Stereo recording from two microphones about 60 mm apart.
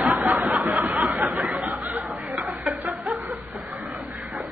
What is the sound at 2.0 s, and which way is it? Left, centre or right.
Chuckle, centre.